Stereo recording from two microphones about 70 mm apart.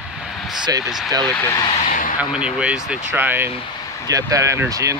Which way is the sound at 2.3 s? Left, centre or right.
Centre.